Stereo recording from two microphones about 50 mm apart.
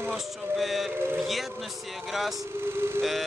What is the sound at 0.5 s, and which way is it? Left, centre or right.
Speech, centre.